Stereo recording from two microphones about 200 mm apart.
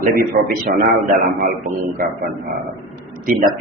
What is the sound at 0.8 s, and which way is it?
Speech, 35° right (ahead or behind).